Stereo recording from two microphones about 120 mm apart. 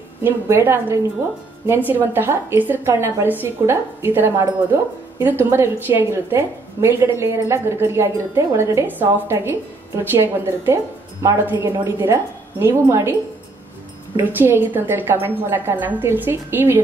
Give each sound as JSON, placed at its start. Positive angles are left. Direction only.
{"t": 0.2, "sound": "a woman's voice", "side_deg": -20}
{"t": 14.1, "sound": "a woman's voice", "side_deg": -15}